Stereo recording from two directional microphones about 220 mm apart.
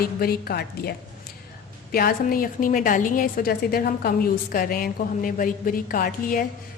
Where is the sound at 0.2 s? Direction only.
45° left (ahead or behind).